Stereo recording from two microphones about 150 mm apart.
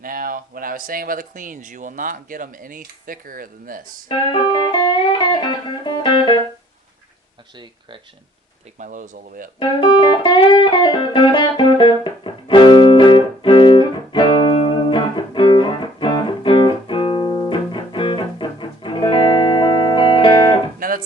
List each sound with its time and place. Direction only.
0.0 s speech: 70° right (ahead or behind)
4.1 s music: 30° left (ahead or behind)
7.5 s speech: 30° right (ahead or behind)
8.8 s speech: 60° right (ahead or behind)
9.6 s music: 30° left (ahead or behind)
20.7 s music: 70° right (ahead or behind)